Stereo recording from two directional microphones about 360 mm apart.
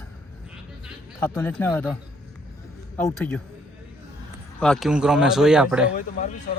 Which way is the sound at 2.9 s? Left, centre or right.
Centre.